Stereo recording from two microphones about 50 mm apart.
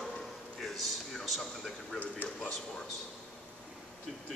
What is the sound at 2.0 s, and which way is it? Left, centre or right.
Speech, left.